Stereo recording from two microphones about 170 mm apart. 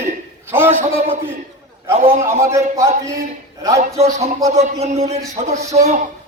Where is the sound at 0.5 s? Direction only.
10° right (ahead or behind).